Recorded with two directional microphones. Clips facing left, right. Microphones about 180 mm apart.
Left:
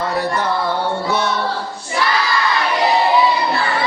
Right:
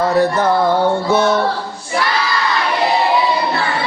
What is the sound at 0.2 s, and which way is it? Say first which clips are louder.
Music: right 7 dB; 45° right (ahead or behind).